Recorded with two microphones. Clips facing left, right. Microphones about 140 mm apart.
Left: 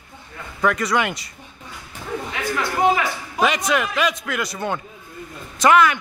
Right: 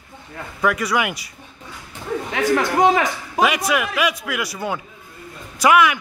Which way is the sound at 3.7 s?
10° right (ahead or behind).